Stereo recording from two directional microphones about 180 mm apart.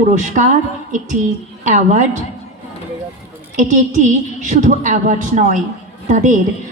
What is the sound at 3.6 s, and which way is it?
A woman's voice, 45° right (ahead or behind).